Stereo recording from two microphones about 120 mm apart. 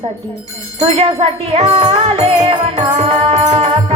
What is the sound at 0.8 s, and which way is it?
Music, 60° right (ahead or behind).